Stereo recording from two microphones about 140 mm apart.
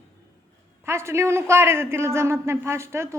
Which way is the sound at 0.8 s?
20° right (ahead or behind).